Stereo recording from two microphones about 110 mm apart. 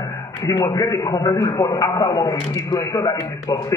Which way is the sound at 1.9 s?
40° left (ahead or behind).